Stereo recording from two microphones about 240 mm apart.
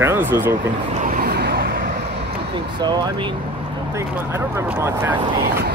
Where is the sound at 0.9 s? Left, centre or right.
Right.